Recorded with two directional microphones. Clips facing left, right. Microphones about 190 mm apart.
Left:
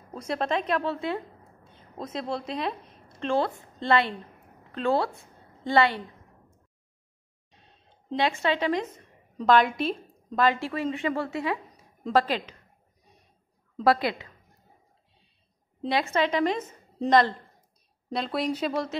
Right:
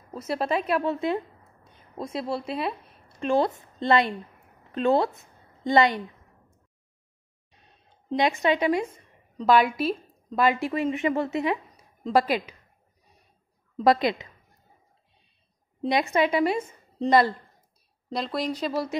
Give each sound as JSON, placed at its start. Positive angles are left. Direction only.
{"t": 0.1, "sound": "a woman's voice", "side_deg": -5}
{"t": 0.9, "sound": "a woman's voice", "side_deg": -20}
{"t": 1.7, "sound": "a sound", "side_deg": -10}
{"t": 3.3, "sound": "a woman's voice", "side_deg": -20}
{"t": 8.2, "sound": "a woman's voice", "side_deg": -15}
{"t": 13.8, "sound": "a woman's voice", "side_deg": -20}
{"t": 15.8, "sound": "a woman's voice", "side_deg": -15}
{"t": 18.1, "sound": "speech", "side_deg": 0}